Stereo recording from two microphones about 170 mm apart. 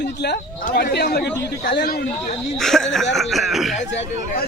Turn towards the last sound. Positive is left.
turn(degrees=0)  # may be behind; listen again after turning